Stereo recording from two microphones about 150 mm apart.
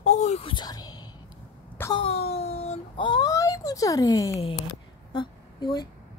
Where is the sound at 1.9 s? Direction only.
40° left (ahead or behind).